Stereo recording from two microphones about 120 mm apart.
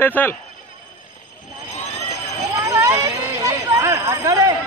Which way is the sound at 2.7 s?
25° right (ahead or behind).